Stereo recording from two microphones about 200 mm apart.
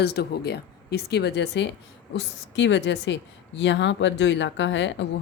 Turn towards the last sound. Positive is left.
turn(degrees=65)  # may be behind; listen again after turning